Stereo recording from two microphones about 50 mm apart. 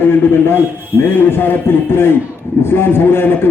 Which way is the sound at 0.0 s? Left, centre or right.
Left.